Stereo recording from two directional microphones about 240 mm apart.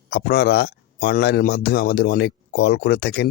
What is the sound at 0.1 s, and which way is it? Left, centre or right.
Speech, left.